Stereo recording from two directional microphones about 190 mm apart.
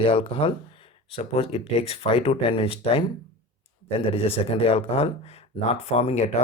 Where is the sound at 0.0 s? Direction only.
30° left (ahead or behind).